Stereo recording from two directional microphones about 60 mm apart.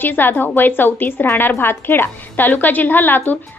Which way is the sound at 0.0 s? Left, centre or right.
Left.